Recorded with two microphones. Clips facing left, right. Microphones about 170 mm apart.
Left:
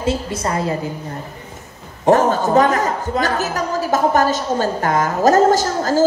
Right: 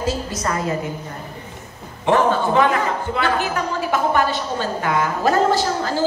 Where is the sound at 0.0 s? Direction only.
25° left (ahead or behind).